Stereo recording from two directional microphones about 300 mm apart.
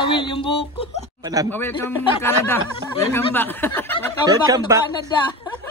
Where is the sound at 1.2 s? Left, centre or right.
Centre.